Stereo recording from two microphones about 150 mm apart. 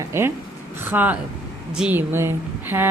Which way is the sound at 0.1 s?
15° right (ahead or behind).